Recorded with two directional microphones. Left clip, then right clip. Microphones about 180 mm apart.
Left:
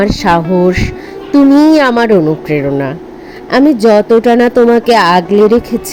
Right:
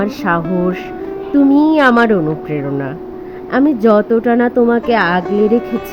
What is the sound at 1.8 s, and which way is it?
A woman's voice, 30° left (ahead or behind).